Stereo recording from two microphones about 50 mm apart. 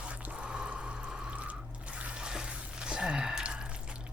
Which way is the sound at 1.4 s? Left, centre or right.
Right.